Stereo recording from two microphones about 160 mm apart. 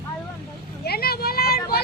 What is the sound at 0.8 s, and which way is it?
Vehicle, 75° left (ahead or behind).